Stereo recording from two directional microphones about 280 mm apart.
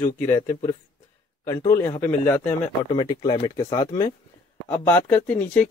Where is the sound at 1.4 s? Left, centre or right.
Centre.